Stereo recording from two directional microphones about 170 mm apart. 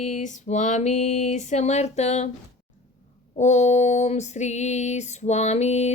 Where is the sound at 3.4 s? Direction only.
45° left (ahead or behind).